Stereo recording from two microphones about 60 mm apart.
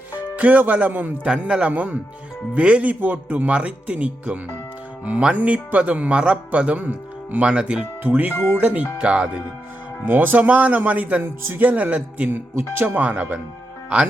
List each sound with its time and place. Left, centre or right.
0.1 s speech: right
1.3 s speech: centre
3.0 s speech: right
8.0 s speech: right
10.1 s speech: right
11.2 s speech: right
11.6 s speech: right